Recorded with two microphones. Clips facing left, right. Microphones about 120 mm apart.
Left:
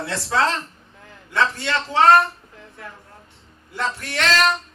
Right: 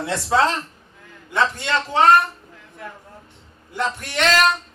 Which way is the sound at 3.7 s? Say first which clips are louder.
Right 1 dB; 15° right (ahead or behind).